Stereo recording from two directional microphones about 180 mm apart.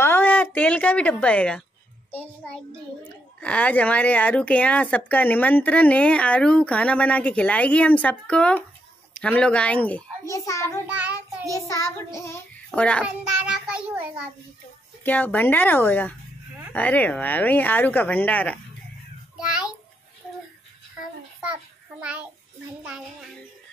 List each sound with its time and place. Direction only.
0.0 s a sound: 10° left (ahead or behind)
2.0 s a child's voice: 5° left (ahead or behind)
10.9 s child singing: 10° right (ahead or behind)
11.5 s speech: 15° left (ahead or behind)
13.0 s a child's voice: 5° right (ahead or behind)
15.0 s speech: 10° left (ahead or behind)
19.4 s a sound: 5° right (ahead or behind)